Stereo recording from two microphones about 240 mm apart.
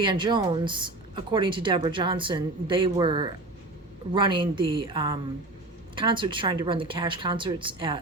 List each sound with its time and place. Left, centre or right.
0.0 s speech: centre